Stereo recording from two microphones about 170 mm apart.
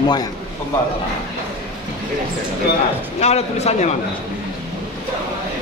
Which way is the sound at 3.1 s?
40° left (ahead or behind).